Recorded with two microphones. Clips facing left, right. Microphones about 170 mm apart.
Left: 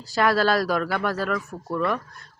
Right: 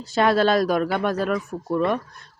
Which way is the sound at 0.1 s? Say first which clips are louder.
Right 2 dB; 20° right (ahead or behind).